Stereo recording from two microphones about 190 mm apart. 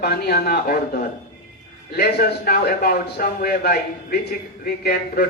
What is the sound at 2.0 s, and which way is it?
A man's voice, 55° left (ahead or behind).